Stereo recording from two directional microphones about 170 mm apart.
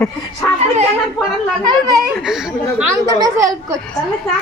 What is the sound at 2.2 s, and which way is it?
Speech, centre (ahead or behind).